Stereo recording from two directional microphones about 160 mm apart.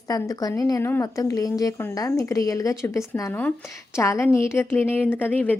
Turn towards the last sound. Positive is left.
turn(degrees=10)  # may be behind; listen again after turning